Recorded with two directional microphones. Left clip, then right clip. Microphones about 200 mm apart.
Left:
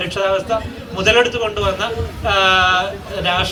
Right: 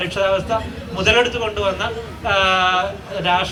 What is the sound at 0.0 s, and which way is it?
A man's voice, 25° left (ahead or behind).